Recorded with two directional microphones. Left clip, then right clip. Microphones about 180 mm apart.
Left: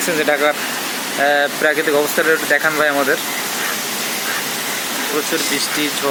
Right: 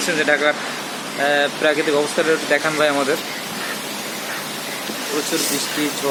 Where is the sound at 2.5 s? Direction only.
5° left (ahead or behind).